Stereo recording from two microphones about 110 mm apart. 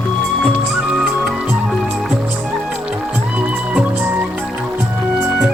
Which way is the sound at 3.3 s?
15° right (ahead or behind).